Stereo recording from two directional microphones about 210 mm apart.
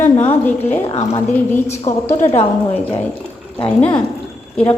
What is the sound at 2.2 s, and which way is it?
Speech, 30° left (ahead or behind).